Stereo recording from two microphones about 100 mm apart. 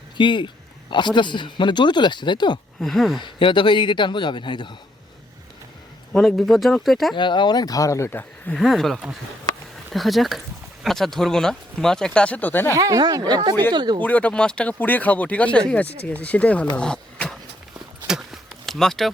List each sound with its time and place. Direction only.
0.2 s speech: 50° left (ahead or behind)
2.8 s speech: centre (ahead or behind)
3.2 s speech: 55° left (ahead or behind)
6.1 s speech: 5° left (ahead or behind)
7.2 s speech: 50° left (ahead or behind); by 8.2 s 30° left (ahead or behind)
8.5 s speech: centre (ahead or behind); by 12.7 s 20° left (ahead or behind)
12.7 s speech: 35° right (ahead or behind)
14.0 s speech: 15° left (ahead or behind)
16.7 s a sound: 10° left (ahead or behind)
18.1 s a sound: 5° right (ahead or behind)